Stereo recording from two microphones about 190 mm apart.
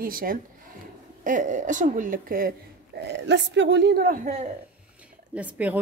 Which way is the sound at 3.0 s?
65° right (ahead or behind).